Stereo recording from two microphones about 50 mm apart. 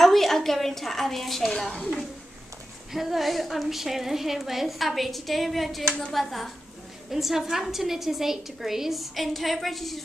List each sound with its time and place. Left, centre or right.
0.0 s a woman's voice: centre
1.6 s a woman's voice: centre
2.9 s a woman's voice: centre
5.9 s a woman's voice: centre
6.1 s a woman's voice: centre